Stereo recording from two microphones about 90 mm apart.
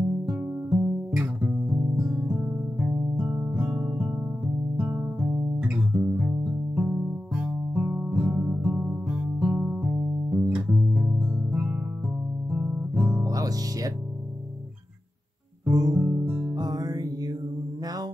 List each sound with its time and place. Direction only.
0.3 s music: 10° right (ahead or behind)
12.4 s guitar: 10° right (ahead or behind)
13.2 s music: 40° right (ahead or behind)
15.7 s guitar: 45° right (ahead or behind)
16.0 s guitar: 10° right (ahead or behind)
16.5 s music: 45° right (ahead or behind)